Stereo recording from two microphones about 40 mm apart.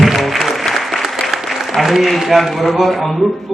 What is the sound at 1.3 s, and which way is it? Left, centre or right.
Applause, centre.